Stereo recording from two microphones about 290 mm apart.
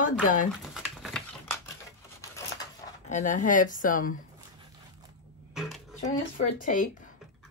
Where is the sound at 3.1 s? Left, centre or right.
Left.